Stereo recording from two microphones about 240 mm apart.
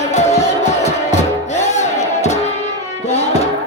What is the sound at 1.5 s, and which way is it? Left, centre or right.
Music, left.